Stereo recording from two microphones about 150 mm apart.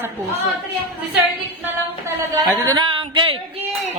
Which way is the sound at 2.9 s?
35° right (ahead or behind).